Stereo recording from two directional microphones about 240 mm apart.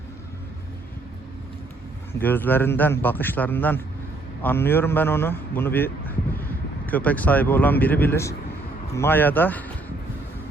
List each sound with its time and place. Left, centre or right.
2.1 s a man's voice: centre